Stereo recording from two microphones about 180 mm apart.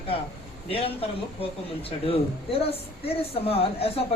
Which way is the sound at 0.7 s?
30° left (ahead or behind).